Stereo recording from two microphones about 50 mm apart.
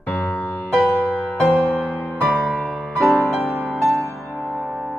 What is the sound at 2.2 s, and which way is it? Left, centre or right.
Music, right.